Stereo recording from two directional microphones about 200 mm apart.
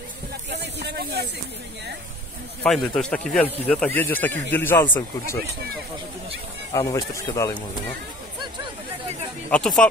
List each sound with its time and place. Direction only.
0.5 s a sound: 55° right (ahead or behind)
2.6 s speech: 5° left (ahead or behind)
6.7 s speech: 15° left (ahead or behind)
9.5 s speech: 5° left (ahead or behind)